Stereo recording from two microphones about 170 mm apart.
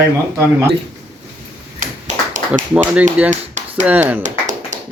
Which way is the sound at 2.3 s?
45° right (ahead or behind).